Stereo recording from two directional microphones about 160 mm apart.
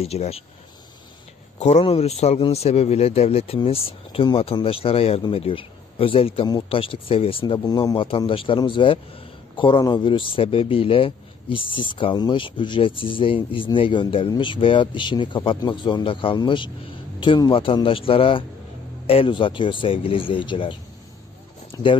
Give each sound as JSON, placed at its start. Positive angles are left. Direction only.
{"t": 0.0, "sound": "a man's voice", "side_deg": 40}
{"t": 1.6, "sound": "a man's voice", "side_deg": 40}
{"t": 21.7, "sound": "a sound", "side_deg": 20}